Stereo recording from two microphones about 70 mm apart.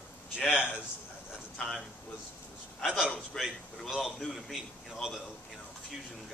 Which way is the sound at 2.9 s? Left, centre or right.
Centre.